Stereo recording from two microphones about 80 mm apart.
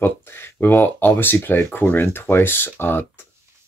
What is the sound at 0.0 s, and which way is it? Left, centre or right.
Speech, left.